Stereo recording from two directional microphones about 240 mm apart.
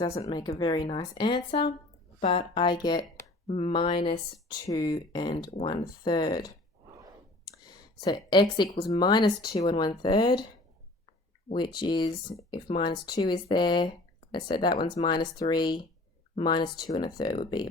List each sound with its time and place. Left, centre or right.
0.2 s speech: centre
7.7 s speech: centre
11.4 s speech: centre